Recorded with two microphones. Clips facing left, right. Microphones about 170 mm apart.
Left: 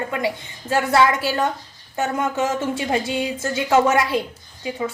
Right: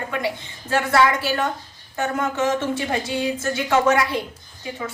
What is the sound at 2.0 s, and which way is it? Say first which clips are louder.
A woman's voice: left 1 dB; 20° left (ahead or behind).